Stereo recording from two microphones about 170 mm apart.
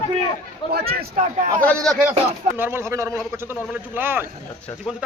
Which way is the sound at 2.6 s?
15° right (ahead or behind).